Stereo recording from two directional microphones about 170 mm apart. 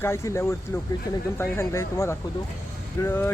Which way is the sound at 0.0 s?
15° left (ahead or behind).